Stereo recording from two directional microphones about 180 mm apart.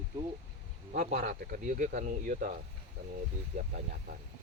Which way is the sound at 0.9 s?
45° right (ahead or behind).